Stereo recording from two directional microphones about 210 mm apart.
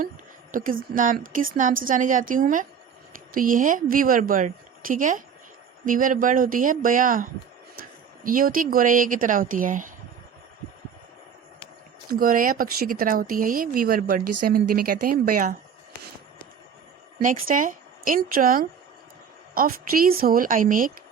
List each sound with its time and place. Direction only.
0.5 s speech: 40° right (ahead or behind)
12.2 s speech: 40° right (ahead or behind)
17.2 s a woman's voice: 40° right (ahead or behind)